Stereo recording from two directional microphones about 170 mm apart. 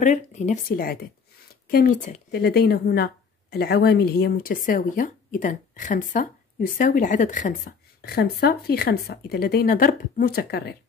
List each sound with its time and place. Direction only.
0.0 s speech: 45° left (ahead or behind)
2.3 s speech: 70° left (ahead or behind)